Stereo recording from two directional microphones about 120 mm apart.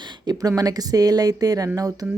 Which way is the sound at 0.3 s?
30° right (ahead or behind).